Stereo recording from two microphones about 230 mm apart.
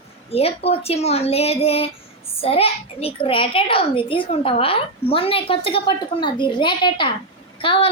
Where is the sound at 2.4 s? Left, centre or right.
Left.